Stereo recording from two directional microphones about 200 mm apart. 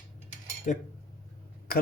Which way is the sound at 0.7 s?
40° left (ahead or behind).